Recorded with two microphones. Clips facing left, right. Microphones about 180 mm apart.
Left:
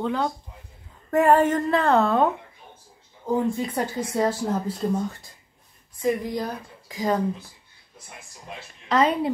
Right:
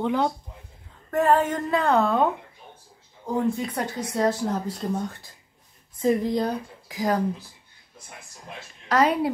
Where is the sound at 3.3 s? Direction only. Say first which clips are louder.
Left 1 dB; 5° left (ahead or behind).